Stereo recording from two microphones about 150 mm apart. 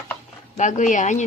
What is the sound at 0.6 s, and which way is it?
Speech, 55° left (ahead or behind).